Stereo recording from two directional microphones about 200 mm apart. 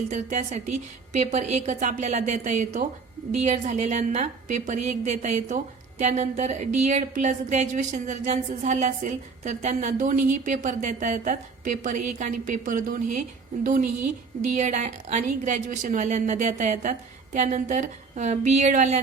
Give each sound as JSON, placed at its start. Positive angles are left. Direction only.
{"t": 0.1, "sound": "a woman's voice", "side_deg": -35}